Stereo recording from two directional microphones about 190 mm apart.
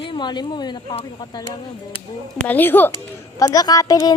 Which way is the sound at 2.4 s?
10° left (ahead or behind).